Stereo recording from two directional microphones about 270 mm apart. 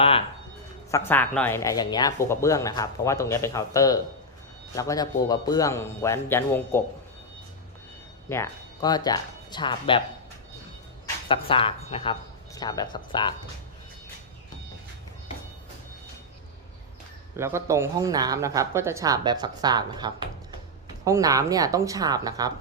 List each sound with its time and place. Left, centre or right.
0.9 s speech: centre
8.3 s speech: centre
11.0 s speech: centre
17.3 s speech: centre